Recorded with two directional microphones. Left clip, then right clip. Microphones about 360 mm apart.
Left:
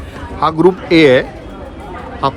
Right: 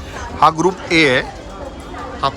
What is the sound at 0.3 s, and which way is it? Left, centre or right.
A man's voice, centre.